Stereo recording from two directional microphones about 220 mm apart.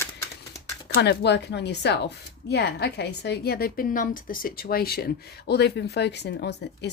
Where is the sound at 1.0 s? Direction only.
50° left (ahead or behind).